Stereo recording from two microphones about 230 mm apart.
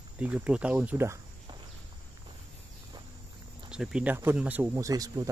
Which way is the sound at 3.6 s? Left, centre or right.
Centre.